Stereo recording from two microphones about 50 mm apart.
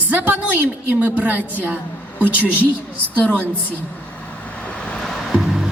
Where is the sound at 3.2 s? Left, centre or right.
Left.